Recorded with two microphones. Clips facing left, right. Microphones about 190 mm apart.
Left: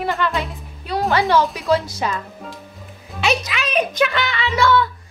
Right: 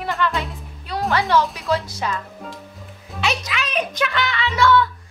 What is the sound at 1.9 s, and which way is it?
Speech, 10° left (ahead or behind).